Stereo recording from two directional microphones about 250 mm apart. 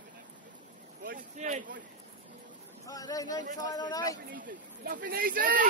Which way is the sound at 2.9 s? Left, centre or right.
Centre.